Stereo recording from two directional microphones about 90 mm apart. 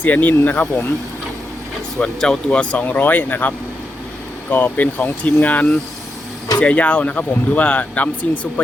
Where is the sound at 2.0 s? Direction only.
5° left (ahead or behind).